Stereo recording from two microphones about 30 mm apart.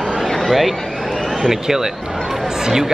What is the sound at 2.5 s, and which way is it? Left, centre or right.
Run, centre.